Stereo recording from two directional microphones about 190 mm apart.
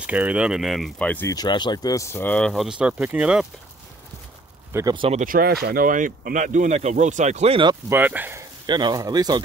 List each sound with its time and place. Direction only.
0.0 s speech: 5° right (ahead or behind); by 1.3 s 10° left (ahead or behind)
1.3 s speech: 20° left (ahead or behind); by 3.4 s 5° right (ahead or behind)
4.7 s speech: 25° right (ahead or behind)
5.2 s speech: 50° right (ahead or behind); by 7.7 s 30° right (ahead or behind)
7.9 s speech: 10° right (ahead or behind)
8.6 s speech: 25° right (ahead or behind)